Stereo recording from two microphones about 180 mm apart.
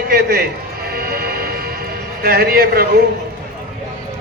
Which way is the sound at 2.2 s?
55° right (ahead or behind).